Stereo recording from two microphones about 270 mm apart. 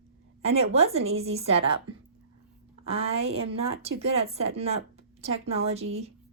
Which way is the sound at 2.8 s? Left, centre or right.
Right.